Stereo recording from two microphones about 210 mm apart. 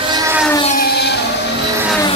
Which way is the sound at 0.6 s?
45° left (ahead or behind).